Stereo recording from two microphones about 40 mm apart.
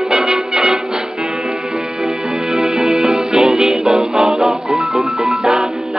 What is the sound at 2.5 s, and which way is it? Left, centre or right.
Music, centre.